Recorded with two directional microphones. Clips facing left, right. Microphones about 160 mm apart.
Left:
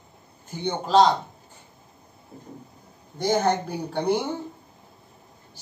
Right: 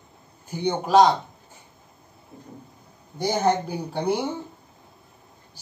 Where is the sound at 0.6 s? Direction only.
15° right (ahead or behind).